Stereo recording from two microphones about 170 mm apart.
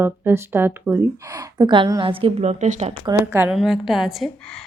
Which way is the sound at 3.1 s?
15° right (ahead or behind).